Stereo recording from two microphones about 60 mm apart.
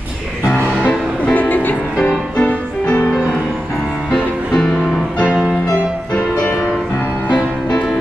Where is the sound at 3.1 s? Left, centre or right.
Centre.